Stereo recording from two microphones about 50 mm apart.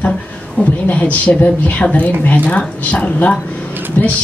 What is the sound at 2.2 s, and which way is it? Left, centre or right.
A woman's voice, left.